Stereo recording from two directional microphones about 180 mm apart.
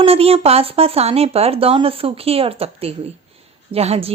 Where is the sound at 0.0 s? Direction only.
35° right (ahead or behind).